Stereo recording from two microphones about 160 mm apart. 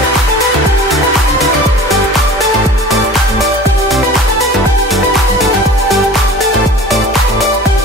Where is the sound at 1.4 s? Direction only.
Centre (ahead or behind).